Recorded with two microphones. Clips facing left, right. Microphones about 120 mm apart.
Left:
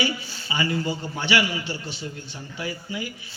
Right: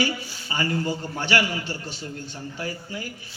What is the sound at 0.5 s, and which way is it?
A man's voice, 45° right (ahead or behind).